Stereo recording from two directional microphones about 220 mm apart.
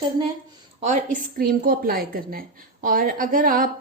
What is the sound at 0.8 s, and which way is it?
A woman's voice, 35° right (ahead or behind).